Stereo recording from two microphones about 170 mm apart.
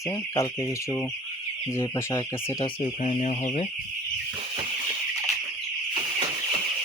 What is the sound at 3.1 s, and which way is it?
Speech, 45° left (ahead or behind).